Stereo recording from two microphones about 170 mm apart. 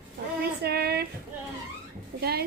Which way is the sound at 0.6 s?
70° right (ahead or behind).